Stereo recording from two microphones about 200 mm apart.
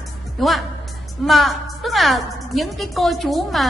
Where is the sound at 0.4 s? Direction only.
Centre (ahead or behind).